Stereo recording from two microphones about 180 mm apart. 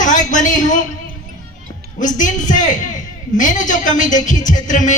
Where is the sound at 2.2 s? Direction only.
45° left (ahead or behind).